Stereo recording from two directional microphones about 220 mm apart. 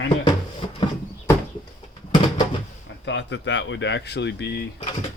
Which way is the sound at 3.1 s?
55° left (ahead or behind).